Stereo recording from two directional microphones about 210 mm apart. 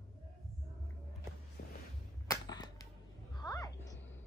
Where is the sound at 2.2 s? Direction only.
20° left (ahead or behind).